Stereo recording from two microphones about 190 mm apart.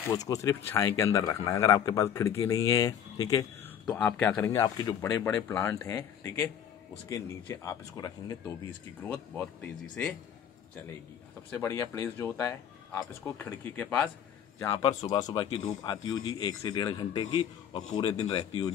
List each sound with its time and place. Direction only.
0.1 s speech: 15° left (ahead or behind)
9.0 s speech: 5° left (ahead or behind)
11.5 s speech: 15° left (ahead or behind)
14.6 s a man's voice: 20° left (ahead or behind)